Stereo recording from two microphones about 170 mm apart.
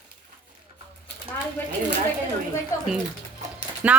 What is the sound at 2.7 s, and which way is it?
Speech, 20° left (ahead or behind).